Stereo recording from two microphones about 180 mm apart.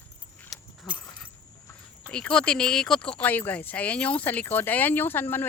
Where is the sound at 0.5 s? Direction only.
Centre (ahead or behind).